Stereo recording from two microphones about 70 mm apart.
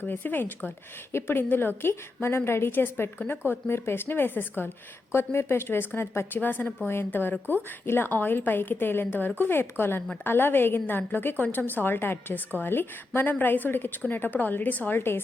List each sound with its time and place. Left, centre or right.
0.1 s a woman's voice: left